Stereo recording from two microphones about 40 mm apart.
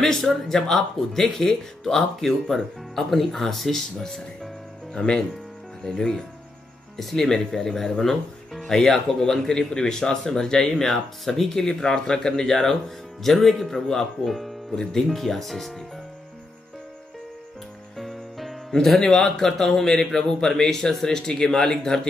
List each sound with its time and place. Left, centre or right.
0.0 s speech: centre
14.8 s speech: centre
17.9 s music: centre
18.7 s speech: centre